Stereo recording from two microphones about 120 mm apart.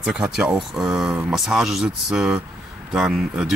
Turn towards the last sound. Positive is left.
turn(degrees=-5)  # may be behind; listen again after turning